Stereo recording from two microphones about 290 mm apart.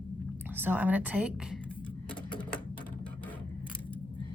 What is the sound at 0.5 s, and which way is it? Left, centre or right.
A woman's voice, centre.